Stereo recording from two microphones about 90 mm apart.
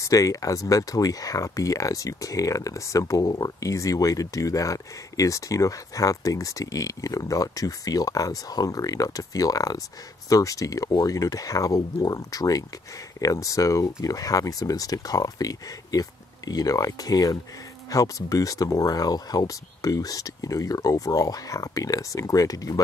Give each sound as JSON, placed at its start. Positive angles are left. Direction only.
{"t": 0.0, "sound": "speech", "side_deg": 40}